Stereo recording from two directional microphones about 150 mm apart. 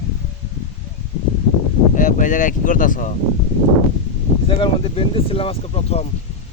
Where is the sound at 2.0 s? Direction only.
60° left (ahead or behind).